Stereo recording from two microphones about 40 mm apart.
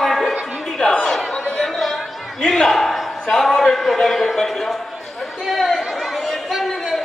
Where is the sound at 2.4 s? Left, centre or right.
Centre.